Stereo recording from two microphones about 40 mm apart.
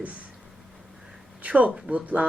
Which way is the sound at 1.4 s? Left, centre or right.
Right.